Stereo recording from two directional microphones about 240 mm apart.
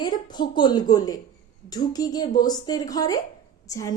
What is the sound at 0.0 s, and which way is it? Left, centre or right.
A woman's voice, centre.